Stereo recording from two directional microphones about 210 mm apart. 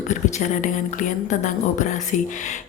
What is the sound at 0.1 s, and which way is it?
A woman's voice, 35° left (ahead or behind).